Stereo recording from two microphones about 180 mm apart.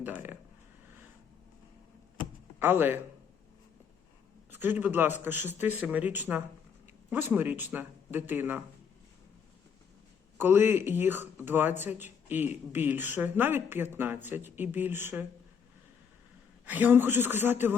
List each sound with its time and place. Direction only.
0.0 s speech: 10° right (ahead or behind)
2.6 s speech: 10° right (ahead or behind)
4.5 s speech: 10° right (ahead or behind)
10.3 s speech: 10° right (ahead or behind)
16.6 s speech: 10° right (ahead or behind)